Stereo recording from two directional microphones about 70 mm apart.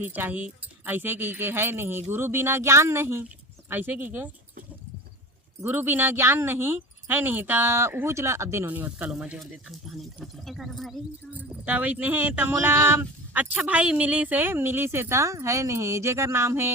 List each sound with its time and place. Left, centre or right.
0.0 s speech: right
5.5 s speech: right
8.6 s speech: right
10.4 s speech: centre
11.3 s speech: right